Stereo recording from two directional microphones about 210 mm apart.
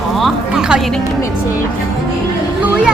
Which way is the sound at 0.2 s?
Centre (ahead or behind).